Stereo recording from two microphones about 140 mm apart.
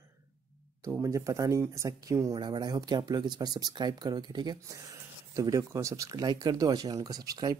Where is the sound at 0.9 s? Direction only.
20° right (ahead or behind).